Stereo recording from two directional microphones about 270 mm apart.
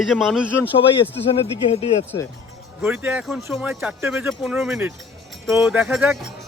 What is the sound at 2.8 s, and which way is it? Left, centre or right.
Speech, centre.